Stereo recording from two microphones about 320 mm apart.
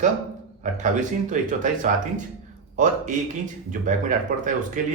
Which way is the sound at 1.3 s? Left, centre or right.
Right.